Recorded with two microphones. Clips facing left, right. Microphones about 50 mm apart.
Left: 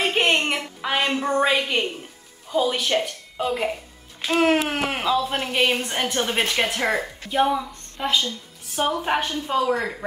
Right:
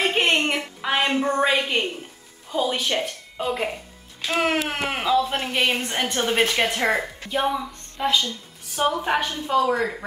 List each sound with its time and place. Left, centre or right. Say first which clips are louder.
0.4 s a sound: right 1 dB; centre
2.5 s a woman's voice: left 2 dB; centre
9.2 s speech: right 1 dB; left
9.6 s speech: right 2 dB; centre